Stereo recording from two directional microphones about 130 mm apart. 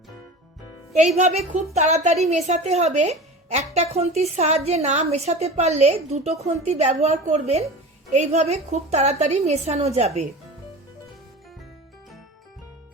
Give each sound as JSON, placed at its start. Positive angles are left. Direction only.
{"t": 0.9, "sound": "a woman's voice", "side_deg": -60}